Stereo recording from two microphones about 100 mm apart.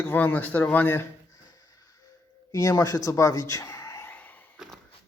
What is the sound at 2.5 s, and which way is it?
A man's voice, 40° left (ahead or behind).